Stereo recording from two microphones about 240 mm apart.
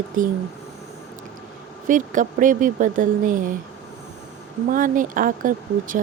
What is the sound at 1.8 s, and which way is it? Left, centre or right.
Speech, right.